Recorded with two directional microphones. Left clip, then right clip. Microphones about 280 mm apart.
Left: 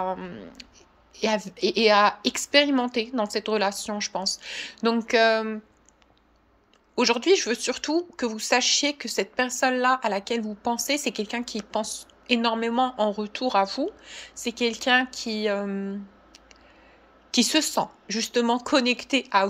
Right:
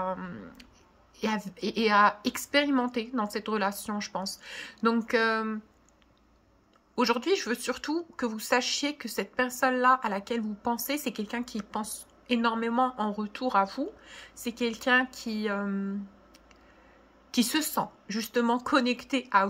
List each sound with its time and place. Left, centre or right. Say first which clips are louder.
0.0 s speech: left 4 dB; centre
7.0 s speech: left 6 dB; centre
17.3 s speech: left 6 dB; centre